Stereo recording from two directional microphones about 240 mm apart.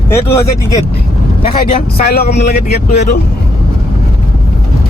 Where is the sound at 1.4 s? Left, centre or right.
Left.